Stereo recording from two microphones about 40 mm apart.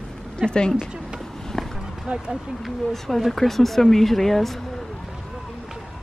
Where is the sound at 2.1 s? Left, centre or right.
Right.